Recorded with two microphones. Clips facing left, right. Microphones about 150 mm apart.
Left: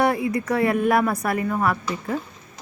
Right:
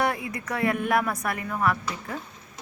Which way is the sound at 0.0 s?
35° left (ahead or behind).